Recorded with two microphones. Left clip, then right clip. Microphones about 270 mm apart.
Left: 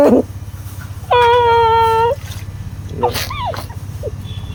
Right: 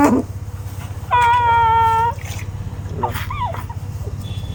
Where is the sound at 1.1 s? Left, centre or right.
Centre.